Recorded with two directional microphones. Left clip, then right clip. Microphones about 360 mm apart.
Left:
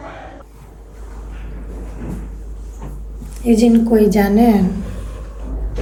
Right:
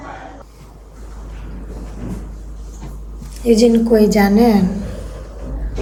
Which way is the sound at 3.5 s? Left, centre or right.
Centre.